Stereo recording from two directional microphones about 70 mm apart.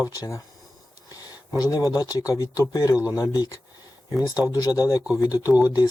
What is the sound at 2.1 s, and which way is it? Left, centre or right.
Speech, left.